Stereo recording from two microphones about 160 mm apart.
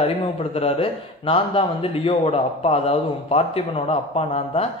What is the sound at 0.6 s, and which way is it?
A man's voice, 35° left (ahead or behind).